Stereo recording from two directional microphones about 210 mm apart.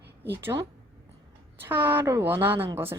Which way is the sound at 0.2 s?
10° right (ahead or behind).